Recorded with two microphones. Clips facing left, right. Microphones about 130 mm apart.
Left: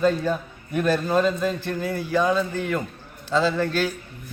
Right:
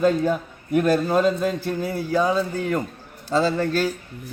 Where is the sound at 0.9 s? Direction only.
5° right (ahead or behind).